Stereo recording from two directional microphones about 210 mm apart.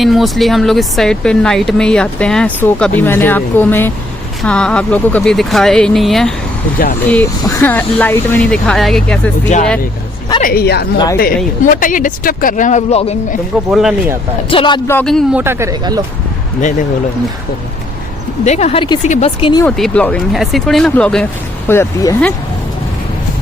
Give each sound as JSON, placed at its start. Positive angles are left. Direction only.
{"t": 0.0, "sound": "speech", "side_deg": 0}
{"t": 10.4, "sound": "a woman's voice", "side_deg": 45}
{"t": 10.9, "sound": "speech", "side_deg": 20}
{"t": 11.6, "sound": "speech", "side_deg": 40}
{"t": 13.7, "sound": "speech", "side_deg": 0}
{"t": 14.5, "sound": "speech", "side_deg": 25}
{"t": 14.8, "sound": "speech", "side_deg": 5}
{"t": 18.4, "sound": "speech", "side_deg": 30}
{"t": 19.6, "sound": "speech", "side_deg": 5}